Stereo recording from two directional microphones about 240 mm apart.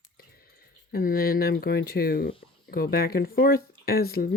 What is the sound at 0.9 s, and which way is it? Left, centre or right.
Speech, left.